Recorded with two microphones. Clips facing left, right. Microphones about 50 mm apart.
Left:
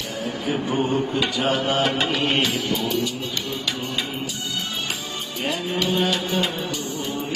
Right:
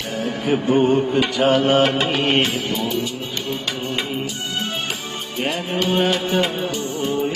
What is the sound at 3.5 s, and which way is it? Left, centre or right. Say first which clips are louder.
Music: right 3 dB; right.